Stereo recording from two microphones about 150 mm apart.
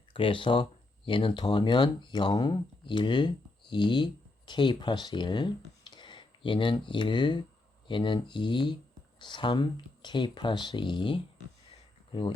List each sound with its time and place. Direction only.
0.1 s speech: 35° left (ahead or behind)